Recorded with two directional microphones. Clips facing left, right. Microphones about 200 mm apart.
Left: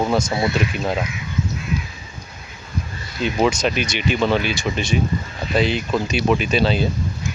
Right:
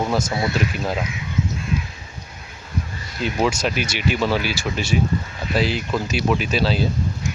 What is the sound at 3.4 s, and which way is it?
Speech, 5° right (ahead or behind).